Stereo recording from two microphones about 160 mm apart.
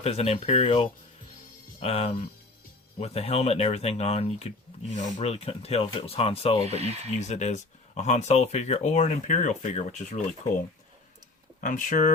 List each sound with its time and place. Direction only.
0.0 s speech: 40° left (ahead or behind)
6.7 s speech: 40° right (ahead or behind)
7.2 s speech: 45° left (ahead or behind)
11.6 s speech: 55° left (ahead or behind)